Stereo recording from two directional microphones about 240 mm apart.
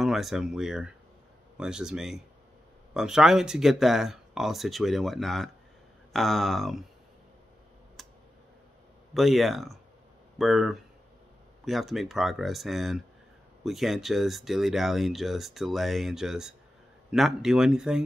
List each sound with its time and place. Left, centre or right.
0.0 s speech: centre
8.0 s tick: centre
9.1 s speech: centre